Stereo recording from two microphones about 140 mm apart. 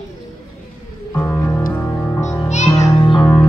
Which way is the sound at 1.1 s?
20° left (ahead or behind).